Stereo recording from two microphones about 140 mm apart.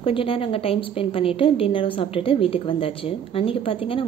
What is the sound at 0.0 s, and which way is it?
Speech, 40° left (ahead or behind).